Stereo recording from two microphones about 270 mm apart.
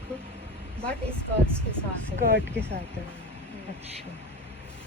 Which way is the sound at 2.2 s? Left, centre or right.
Right.